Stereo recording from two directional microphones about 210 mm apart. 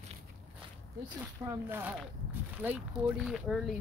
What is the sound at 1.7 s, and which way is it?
Speech, 10° right (ahead or behind).